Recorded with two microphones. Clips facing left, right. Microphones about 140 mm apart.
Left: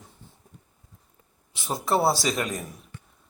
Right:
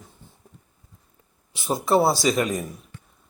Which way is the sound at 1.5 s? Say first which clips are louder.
Right 5 dB; centre (ahead or behind).